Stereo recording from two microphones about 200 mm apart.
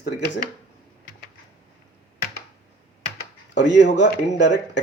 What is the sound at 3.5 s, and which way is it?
Speech, 60° left (ahead or behind).